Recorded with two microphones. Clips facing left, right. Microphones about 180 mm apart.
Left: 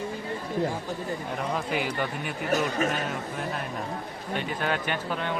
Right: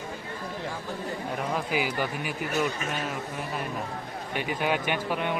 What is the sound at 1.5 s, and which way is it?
Speech, 5° right (ahead or behind).